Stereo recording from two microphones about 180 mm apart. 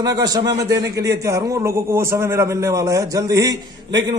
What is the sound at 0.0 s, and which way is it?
A man's voice, 20° right (ahead or behind).